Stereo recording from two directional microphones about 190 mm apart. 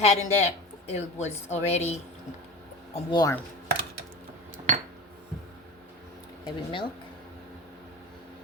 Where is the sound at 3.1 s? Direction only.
20° left (ahead or behind).